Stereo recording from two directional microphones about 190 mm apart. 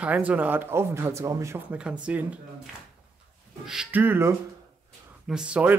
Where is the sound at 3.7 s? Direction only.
5° right (ahead or behind).